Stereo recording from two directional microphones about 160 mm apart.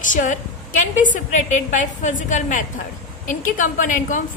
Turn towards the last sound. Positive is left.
turn(degrees=55)  # may be behind; listen again after turning